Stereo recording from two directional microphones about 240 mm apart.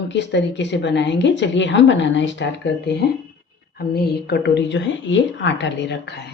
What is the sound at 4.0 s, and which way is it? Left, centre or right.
A woman's voice, left.